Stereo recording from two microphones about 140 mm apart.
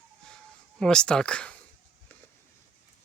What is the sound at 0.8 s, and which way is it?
Speech, 5° left (ahead or behind).